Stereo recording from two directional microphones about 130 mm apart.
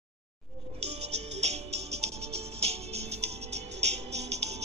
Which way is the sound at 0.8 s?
55° right (ahead or behind).